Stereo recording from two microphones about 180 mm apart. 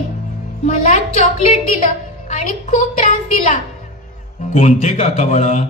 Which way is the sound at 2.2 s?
40° left (ahead or behind).